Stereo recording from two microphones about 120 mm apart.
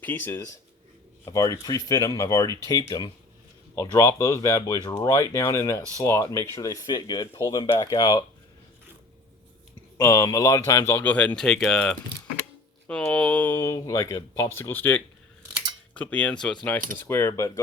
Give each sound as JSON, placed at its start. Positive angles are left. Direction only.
{"t": 0.0, "sound": "speech", "side_deg": 15}
{"t": 1.2, "sound": "speech", "side_deg": 30}
{"t": 7.6, "sound": "speech", "side_deg": 45}
{"t": 7.9, "sound": "speech", "side_deg": 35}
{"t": 10.0, "sound": "speech", "side_deg": 30}
{"t": 17.1, "sound": "speech", "side_deg": 20}